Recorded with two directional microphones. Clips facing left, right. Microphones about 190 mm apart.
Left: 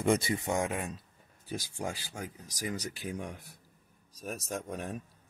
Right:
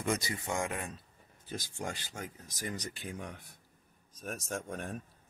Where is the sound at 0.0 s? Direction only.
25° left (ahead or behind); by 5.0 s 5° left (ahead or behind).